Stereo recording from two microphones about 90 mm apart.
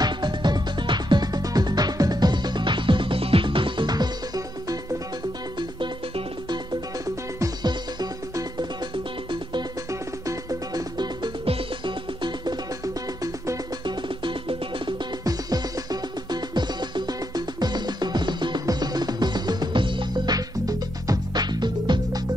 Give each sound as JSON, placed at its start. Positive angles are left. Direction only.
{"t": 0.0, "sound": "music", "side_deg": -55}
{"t": 5.6, "sound": "music", "side_deg": -60}
{"t": 7.6, "sound": "music", "side_deg": -50}
{"t": 9.3, "sound": "music", "side_deg": -60}
{"t": 9.8, "sound": "music", "side_deg": -40}
{"t": 11.4, "sound": "music", "side_deg": -80}
{"t": 12.8, "sound": "music", "side_deg": -40}
{"t": 13.8, "sound": "music", "side_deg": -65}
{"t": 15.2, "sound": "music", "side_deg": -45}
{"t": 20.3, "sound": "music", "side_deg": -45}